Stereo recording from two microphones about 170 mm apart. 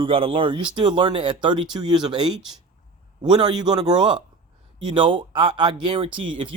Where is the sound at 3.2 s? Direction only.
25° right (ahead or behind).